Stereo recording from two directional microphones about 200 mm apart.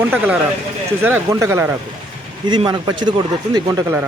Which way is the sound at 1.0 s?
10° right (ahead or behind).